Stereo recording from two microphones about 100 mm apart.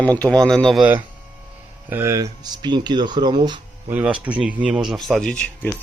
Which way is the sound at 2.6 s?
45° right (ahead or behind).